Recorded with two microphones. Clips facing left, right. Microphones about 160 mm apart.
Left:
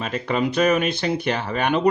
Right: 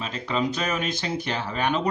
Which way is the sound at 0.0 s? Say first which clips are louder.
Left 4 dB; 60° left (ahead or behind).